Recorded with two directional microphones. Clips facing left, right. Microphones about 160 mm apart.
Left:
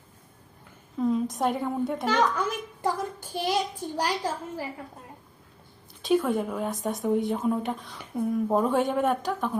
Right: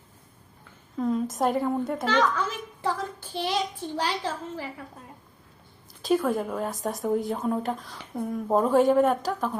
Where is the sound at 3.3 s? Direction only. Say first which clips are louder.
Left 1 dB; 10° left (ahead or behind).